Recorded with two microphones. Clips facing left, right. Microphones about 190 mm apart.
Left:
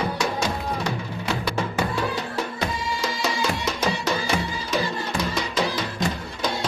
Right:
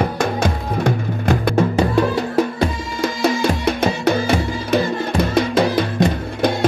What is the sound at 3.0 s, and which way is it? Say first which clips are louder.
Music: right 10 dB; 55° right (ahead or behind).